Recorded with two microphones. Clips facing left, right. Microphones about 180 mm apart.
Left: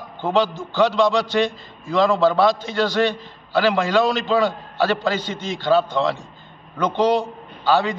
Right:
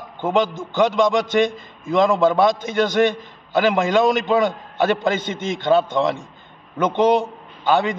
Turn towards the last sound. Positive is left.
turn(degrees=-20)  # may be behind; listen again after turning